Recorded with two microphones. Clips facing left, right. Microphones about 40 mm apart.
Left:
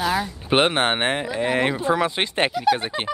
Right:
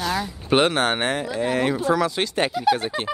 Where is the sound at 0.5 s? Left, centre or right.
Left.